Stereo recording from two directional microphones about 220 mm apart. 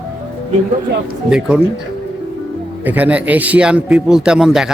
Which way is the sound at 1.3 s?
5° right (ahead or behind).